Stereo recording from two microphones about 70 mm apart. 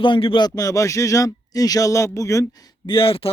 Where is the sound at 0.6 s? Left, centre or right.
Left.